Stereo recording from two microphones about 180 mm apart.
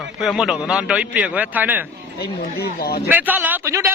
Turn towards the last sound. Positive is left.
turn(degrees=-15)  # may be behind; listen again after turning